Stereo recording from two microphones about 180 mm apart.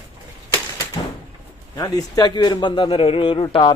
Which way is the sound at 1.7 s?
20° left (ahead or behind).